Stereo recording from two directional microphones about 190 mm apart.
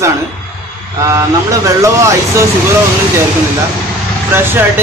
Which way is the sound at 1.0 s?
15° right (ahead or behind).